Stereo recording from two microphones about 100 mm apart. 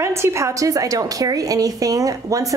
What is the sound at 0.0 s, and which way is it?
A woman's voice, 25° right (ahead or behind).